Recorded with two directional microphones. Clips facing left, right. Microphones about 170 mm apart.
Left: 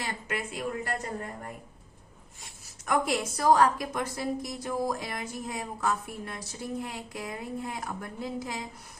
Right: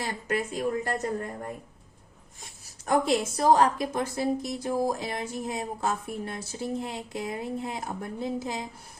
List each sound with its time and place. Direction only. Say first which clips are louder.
0.0 s speech: right 5 dB; 40° right (ahead or behind)
2.8 s a woman's voice: right 4 dB; 30° right (ahead or behind)